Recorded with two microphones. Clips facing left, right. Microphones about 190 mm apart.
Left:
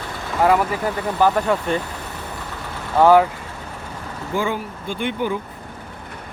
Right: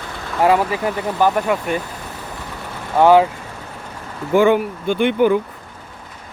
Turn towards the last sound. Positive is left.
turn(degrees=-65)  # may be behind; listen again after turning